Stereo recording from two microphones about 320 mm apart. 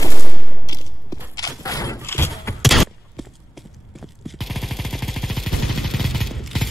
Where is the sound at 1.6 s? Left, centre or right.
Centre.